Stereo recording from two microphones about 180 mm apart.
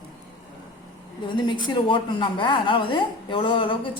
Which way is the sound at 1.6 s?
25° left (ahead or behind).